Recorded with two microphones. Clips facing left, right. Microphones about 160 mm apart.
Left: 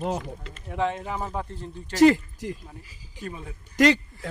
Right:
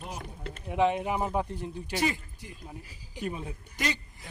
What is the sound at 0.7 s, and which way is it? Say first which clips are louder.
Speech: right 2 dB; 15° right (ahead or behind).